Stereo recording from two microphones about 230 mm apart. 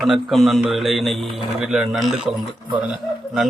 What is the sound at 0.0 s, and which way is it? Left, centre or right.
A man's voice, centre.